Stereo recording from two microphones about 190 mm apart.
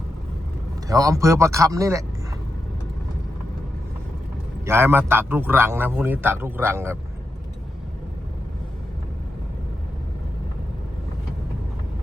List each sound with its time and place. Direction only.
0.9 s a man's voice: 15° right (ahead or behind)
4.6 s a man's voice: 10° right (ahead or behind)